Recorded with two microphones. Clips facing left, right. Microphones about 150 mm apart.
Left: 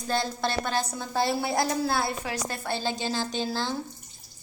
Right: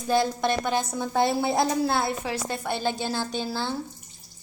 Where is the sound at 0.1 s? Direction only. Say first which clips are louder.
Right 5 dB; 15° right (ahead or behind).